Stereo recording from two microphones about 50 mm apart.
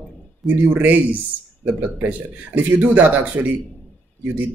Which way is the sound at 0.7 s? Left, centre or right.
Right.